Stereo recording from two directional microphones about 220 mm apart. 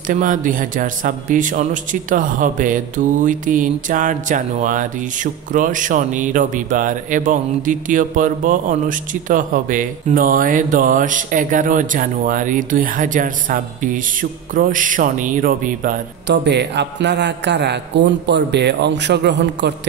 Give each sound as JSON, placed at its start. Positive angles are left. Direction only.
{"t": 0.1, "sound": "a man's voice", "side_deg": -35}
{"t": 16.3, "sound": "a man's voice", "side_deg": -50}